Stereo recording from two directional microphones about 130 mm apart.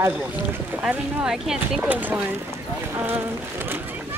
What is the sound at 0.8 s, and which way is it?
Speech, 5° right (ahead or behind).